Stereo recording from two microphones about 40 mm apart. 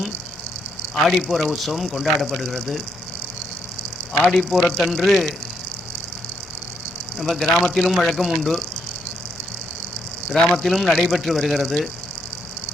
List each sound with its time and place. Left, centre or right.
1.0 s speech: centre
4.1 s a man's voice: centre
4.4 s speech: centre
7.2 s speech: centre
10.5 s speech: centre